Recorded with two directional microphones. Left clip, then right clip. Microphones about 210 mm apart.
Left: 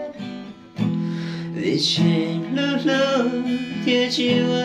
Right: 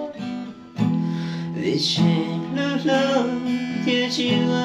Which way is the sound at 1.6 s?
5° left (ahead or behind).